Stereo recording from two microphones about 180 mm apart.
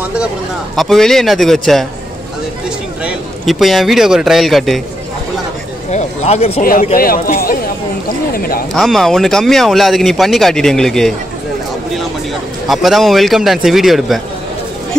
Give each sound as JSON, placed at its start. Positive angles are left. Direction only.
{"t": 0.7, "sound": "speech", "side_deg": 0}
{"t": 3.0, "sound": "a man's voice", "side_deg": -5}
{"t": 5.9, "sound": "a sound", "side_deg": 40}
{"t": 6.6, "sound": "a man's voice", "side_deg": 50}
{"t": 8.4, "sound": "a sound", "side_deg": 55}
{"t": 8.7, "sound": "speech", "side_deg": 0}
{"t": 12.6, "sound": "speech", "side_deg": 0}